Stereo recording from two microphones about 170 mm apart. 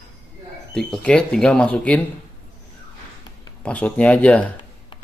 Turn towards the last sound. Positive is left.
turn(degrees=5)  # may be behind; listen again after turning